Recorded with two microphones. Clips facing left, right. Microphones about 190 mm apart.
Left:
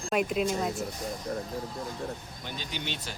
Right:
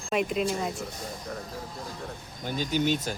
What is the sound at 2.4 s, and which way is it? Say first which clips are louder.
Speech: right 11 dB; 45° right (ahead or behind).